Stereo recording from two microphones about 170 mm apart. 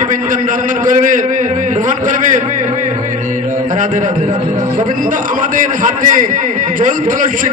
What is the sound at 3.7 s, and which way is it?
A man's voice, 50° right (ahead or behind).